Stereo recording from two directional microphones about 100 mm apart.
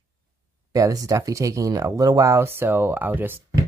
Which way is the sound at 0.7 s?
35° right (ahead or behind).